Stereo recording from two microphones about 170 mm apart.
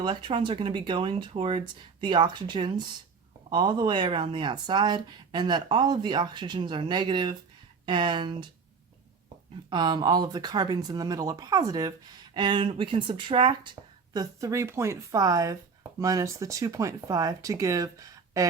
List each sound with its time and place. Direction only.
0.0 s speech: 30° right (ahead or behind)
9.6 s speech: 25° right (ahead or behind)
13.8 s a sound: 20° right (ahead or behind)
14.1 s speech: 20° right (ahead or behind)